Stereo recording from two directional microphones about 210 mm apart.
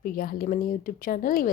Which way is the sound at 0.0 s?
45° left (ahead or behind).